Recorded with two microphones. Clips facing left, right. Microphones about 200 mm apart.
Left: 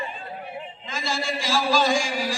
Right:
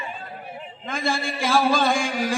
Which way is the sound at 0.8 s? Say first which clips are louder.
Right 3 dB; 55° right (ahead or behind).